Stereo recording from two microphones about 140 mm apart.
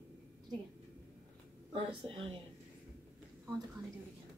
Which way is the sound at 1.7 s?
40° right (ahead or behind).